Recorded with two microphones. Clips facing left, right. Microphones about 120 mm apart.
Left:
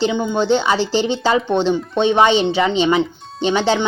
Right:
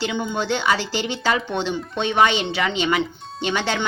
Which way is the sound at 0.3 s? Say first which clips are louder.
Left 5 dB; 25° left (ahead or behind).